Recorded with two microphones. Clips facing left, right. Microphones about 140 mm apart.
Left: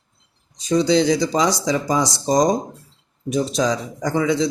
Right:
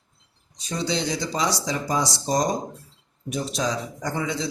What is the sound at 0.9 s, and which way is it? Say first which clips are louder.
Speech: left 8 dB; 90° left.